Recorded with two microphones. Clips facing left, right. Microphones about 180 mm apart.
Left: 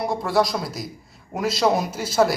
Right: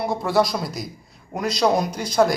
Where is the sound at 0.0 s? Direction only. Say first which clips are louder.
Right 1 dB; centre (ahead or behind).